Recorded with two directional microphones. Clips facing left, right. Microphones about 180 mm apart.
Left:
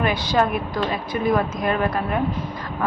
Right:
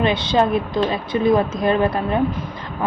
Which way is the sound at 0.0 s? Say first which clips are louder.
Right 3 dB; 25° right (ahead or behind).